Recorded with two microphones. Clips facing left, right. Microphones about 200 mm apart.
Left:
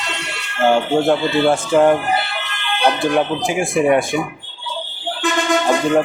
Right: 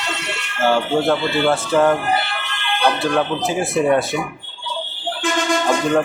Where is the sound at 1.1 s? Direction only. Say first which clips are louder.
Left 3 dB; 15° left (ahead or behind).